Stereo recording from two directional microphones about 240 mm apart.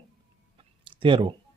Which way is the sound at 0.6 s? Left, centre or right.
Right.